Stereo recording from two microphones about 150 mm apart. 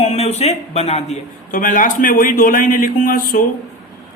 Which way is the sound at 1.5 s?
65° left (ahead or behind).